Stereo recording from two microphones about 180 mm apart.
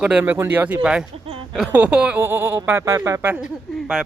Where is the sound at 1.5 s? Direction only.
5° right (ahead or behind).